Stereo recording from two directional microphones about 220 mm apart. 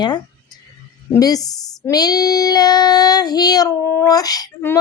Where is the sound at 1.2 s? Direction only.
15° left (ahead or behind).